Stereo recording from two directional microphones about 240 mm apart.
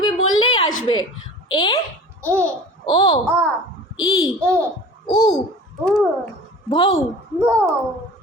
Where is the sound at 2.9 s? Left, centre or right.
Left.